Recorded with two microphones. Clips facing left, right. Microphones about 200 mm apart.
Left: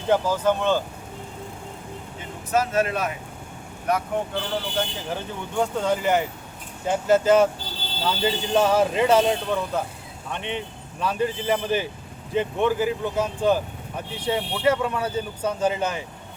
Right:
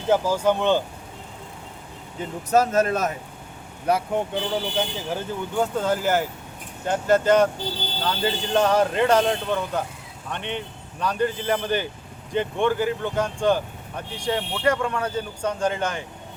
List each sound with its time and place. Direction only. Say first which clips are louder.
0.1 s speech: right 1 dB; 10° right (ahead or behind)
2.5 s speech: right 3 dB; 40° right (ahead or behind)
4.4 s speech: right 2 dB; 10° right (ahead or behind)